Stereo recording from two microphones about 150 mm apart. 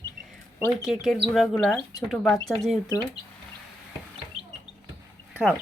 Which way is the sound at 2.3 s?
25° left (ahead or behind).